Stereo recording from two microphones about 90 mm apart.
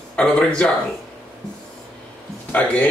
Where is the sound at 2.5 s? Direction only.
15° left (ahead or behind).